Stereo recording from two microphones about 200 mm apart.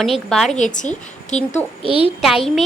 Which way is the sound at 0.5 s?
40° left (ahead or behind).